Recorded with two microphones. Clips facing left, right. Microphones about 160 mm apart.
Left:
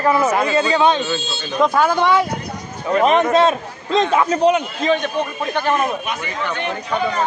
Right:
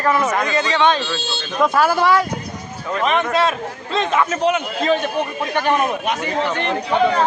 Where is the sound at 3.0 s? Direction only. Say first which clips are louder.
Left 4 dB; 40° left (ahead or behind).